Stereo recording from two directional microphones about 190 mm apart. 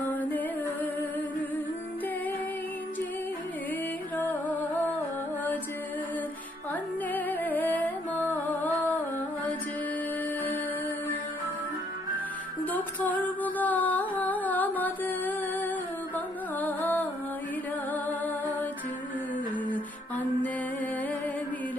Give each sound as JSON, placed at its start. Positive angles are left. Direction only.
{"t": 0.0, "sound": "music", "side_deg": 10}
{"t": 4.3, "sound": "music", "side_deg": 10}
{"t": 7.1, "sound": "music", "side_deg": 10}
{"t": 12.7, "sound": "music", "side_deg": 10}
{"t": 19.7, "sound": "music", "side_deg": 10}